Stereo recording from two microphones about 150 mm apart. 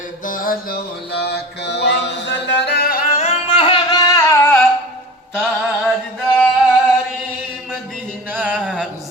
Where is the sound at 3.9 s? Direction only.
20° left (ahead or behind).